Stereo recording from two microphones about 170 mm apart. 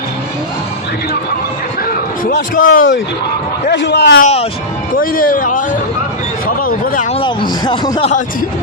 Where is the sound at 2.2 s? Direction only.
50° left (ahead or behind).